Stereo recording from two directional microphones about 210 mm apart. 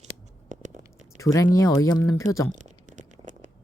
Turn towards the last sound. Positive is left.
turn(degrees=-35)  # may be behind; listen again after turning